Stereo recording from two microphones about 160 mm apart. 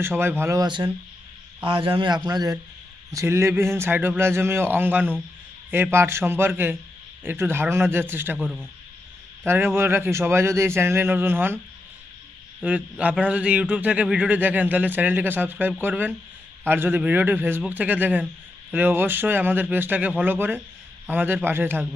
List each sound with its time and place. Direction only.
0.0 s a man's voice: 15° right (ahead or behind)
9.5 s a man's voice: 15° right (ahead or behind)
12.6 s a man's voice: 10° right (ahead or behind)